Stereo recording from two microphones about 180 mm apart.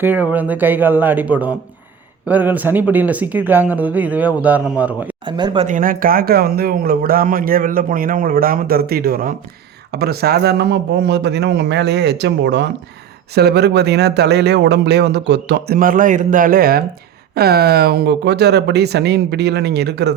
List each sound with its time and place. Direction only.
0.0 s speech: 10° right (ahead or behind)
5.2 s speech: 25° right (ahead or behind)
5.6 s a man's voice: 50° right (ahead or behind); by 20.1 s 65° right (ahead or behind)